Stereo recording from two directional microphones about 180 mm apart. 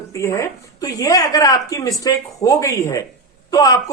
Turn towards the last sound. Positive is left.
turn(degrees=20)  # may be behind; listen again after turning